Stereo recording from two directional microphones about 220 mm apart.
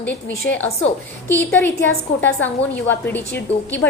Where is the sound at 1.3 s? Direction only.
10° left (ahead or behind).